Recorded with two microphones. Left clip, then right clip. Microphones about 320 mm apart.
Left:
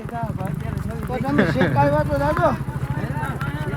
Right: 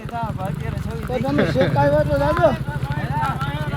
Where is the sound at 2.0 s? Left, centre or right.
Left.